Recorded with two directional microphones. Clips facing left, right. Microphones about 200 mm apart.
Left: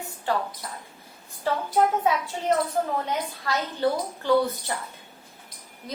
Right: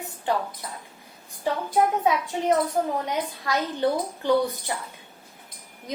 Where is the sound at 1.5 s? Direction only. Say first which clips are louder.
Even; 15° right (ahead or behind).